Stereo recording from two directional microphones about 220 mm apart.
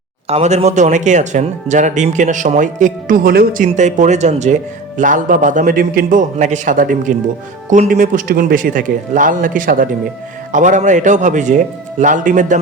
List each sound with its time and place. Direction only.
0.3 s speech: 30° right (ahead or behind)